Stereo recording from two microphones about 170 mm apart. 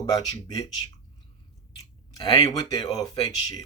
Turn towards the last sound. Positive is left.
turn(degrees=25)  # may be behind; listen again after turning